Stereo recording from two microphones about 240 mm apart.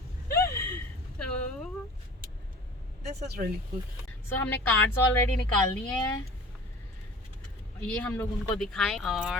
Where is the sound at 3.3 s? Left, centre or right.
Right.